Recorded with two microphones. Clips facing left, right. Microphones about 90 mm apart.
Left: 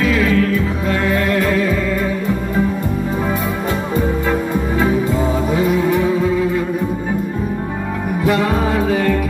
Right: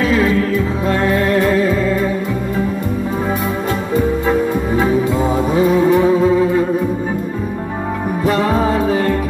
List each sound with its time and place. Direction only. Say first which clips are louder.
0.0 s music: right 1 dB; 35° right (ahead or behind)
5.5 s music: right 5 dB; 35° right (ahead or behind)
8.3 s music: right 1 dB; 35° right (ahead or behind)